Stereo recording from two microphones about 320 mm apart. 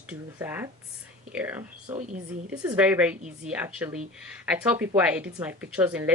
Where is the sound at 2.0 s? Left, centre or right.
Right.